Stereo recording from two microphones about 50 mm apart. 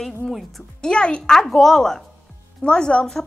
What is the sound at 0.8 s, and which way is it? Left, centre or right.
A woman's voice, centre.